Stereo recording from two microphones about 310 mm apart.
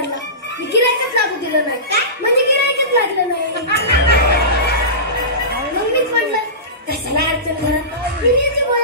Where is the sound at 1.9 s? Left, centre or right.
Right.